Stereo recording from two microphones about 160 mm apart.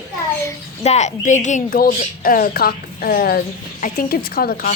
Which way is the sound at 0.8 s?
45° left (ahead or behind).